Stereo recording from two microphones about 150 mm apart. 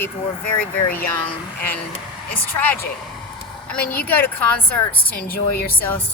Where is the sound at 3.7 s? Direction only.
10° left (ahead or behind).